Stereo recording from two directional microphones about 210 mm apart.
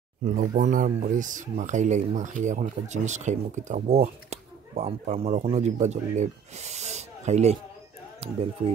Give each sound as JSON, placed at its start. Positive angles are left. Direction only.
{"t": 0.2, "sound": "speech", "side_deg": -35}